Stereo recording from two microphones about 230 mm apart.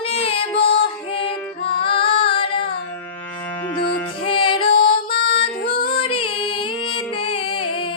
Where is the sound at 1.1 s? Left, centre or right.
Left.